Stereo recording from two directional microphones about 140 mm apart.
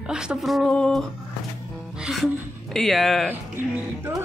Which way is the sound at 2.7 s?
Centre (ahead or behind).